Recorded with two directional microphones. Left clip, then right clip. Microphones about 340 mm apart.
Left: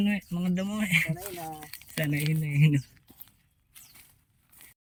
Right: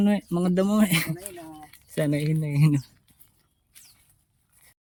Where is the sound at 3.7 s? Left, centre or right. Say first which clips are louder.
Right 1 dB; centre.